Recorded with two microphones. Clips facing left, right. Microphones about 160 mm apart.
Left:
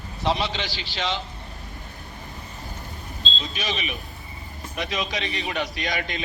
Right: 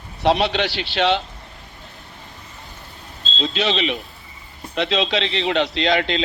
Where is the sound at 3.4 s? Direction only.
70° right (ahead or behind).